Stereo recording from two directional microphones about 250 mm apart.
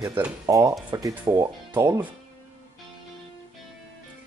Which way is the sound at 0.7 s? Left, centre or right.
Centre.